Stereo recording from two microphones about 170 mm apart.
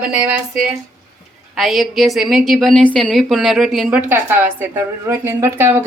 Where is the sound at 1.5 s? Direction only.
Centre (ahead or behind).